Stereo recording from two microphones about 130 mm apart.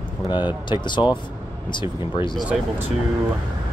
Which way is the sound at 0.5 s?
35° left (ahead or behind).